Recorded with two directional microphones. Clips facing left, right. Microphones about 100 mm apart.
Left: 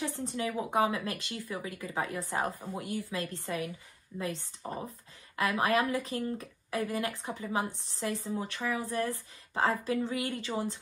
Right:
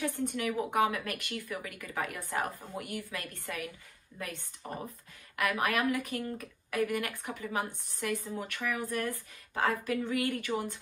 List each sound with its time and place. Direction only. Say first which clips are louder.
0.3 s speech: even; 25° left (ahead or behind)